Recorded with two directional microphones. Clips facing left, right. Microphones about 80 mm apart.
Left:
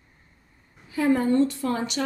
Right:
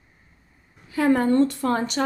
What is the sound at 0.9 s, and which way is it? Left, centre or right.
A woman's voice, right.